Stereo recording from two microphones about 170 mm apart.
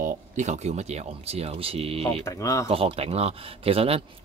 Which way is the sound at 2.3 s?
20° left (ahead or behind).